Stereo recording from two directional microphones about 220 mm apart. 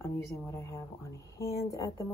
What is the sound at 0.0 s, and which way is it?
Speech, 10° left (ahead or behind).